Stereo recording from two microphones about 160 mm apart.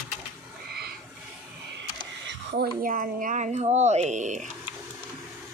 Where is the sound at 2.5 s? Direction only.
70° right (ahead or behind); by 4.4 s 50° right (ahead or behind).